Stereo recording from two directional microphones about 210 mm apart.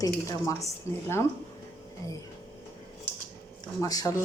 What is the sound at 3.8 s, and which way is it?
Speech, 15° left (ahead or behind).